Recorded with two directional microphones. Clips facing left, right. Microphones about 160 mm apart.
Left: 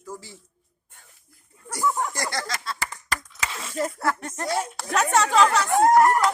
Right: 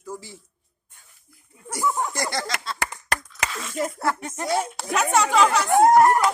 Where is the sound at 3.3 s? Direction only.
25° left (ahead or behind).